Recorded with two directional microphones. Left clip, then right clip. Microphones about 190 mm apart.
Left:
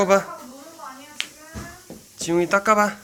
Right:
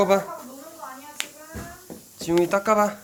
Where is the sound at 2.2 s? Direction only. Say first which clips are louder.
Left 2 dB; centre (ahead or behind).